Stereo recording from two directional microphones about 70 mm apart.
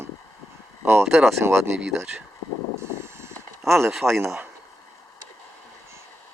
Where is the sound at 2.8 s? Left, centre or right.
Right.